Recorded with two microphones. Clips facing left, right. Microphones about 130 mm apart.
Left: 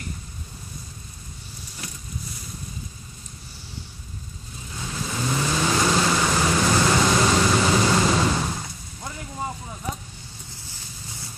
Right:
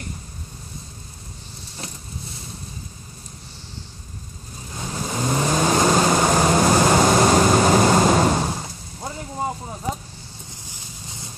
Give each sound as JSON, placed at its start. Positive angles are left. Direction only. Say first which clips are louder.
{"t": 4.7, "sound": "vehicle", "louder": "right 3 dB", "side_deg": -40}
{"t": 8.4, "sound": "artillery fire", "louder": "right 3 dB", "side_deg": -30}